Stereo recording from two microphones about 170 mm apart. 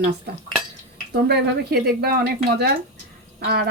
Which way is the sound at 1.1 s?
70° right (ahead or behind).